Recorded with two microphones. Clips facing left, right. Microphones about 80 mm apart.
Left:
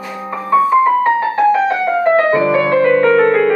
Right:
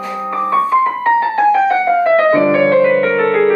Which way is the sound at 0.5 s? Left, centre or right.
Centre.